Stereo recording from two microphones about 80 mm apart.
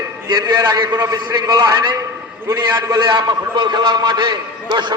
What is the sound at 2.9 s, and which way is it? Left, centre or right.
A man's voice, right.